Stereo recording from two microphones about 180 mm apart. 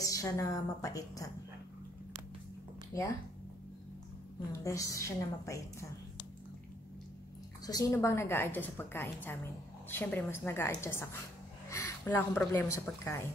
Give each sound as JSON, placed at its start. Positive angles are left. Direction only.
{"t": 0.0, "sound": "a woman's voice", "side_deg": 20}
{"t": 4.5, "sound": "a woman's voice", "side_deg": 15}
{"t": 7.6, "sound": "a woman's voice", "side_deg": 20}